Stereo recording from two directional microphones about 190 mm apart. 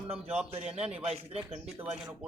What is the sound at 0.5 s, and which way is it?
Speech, 35° right (ahead or behind).